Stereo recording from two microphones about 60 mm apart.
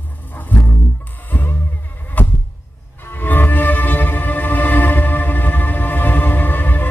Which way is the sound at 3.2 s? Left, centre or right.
Left.